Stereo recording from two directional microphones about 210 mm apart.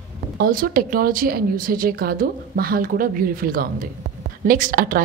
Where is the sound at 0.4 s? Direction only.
45° right (ahead or behind).